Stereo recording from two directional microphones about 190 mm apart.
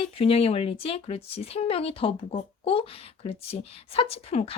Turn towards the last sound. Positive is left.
turn(degrees=30)  # may be behind; listen again after turning